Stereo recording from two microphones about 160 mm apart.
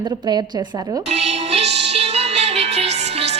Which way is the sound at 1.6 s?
90° right.